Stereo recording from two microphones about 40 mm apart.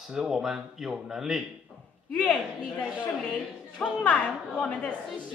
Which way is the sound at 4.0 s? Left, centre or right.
Left.